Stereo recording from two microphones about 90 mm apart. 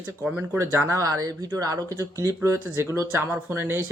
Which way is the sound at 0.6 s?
25° right (ahead or behind).